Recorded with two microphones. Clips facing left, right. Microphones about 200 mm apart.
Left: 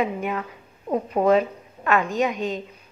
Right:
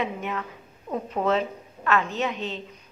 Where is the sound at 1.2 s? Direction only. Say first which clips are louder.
Left 6 dB; 10° left (ahead or behind).